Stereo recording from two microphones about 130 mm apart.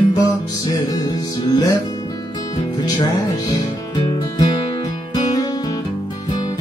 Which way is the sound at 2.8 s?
35° left (ahead or behind).